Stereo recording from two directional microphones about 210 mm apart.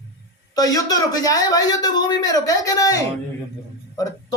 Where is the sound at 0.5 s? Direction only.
15° left (ahead or behind).